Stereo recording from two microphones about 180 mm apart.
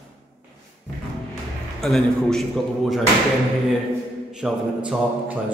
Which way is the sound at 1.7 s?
Centre (ahead or behind).